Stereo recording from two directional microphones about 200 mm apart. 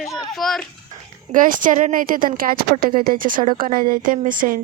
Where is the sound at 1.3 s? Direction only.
40° right (ahead or behind).